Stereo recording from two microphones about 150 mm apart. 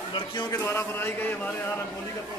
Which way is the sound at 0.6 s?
15° left (ahead or behind).